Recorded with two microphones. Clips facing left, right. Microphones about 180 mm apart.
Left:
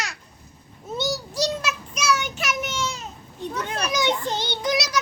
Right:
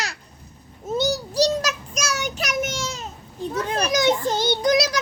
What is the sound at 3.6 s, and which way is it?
Children playing, 35° right (ahead or behind).